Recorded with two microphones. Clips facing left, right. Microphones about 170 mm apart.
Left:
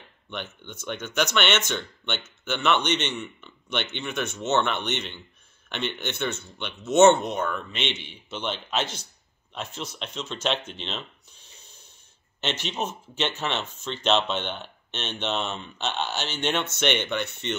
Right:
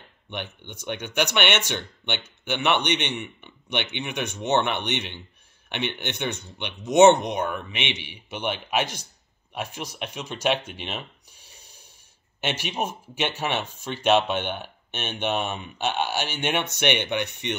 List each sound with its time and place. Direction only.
0.3 s speech: 15° right (ahead or behind)
5.9 s speech: 15° right (ahead or behind)